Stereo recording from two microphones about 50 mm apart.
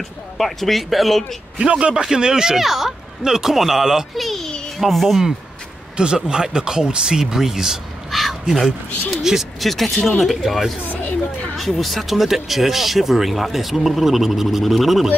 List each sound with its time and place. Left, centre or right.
0.4 s speech: centre
1.6 s a man's voice: right
4.1 s a child's voice: centre
5.9 s speech: centre
8.2 s crow: centre
9.2 s speech: centre
9.7 s speech: centre
10.9 s a sound: left
11.5 s speech: centre